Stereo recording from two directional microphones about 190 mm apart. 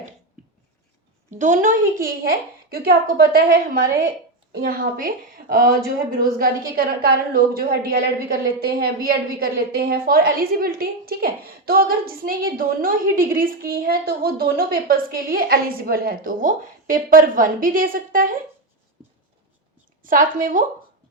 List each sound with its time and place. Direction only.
1.4 s speech: 40° right (ahead or behind)
2.0 s a woman's voice: 50° right (ahead or behind)
20.0 s a woman's voice: 45° right (ahead or behind)